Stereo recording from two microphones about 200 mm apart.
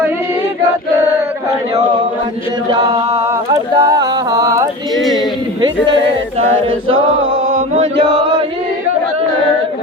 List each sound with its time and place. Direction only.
3.2 s mantra: 15° right (ahead or behind)
4.9 s speech: centre (ahead or behind)
5.6 s speech: 25° right (ahead or behind)
7.4 s chant: 80° right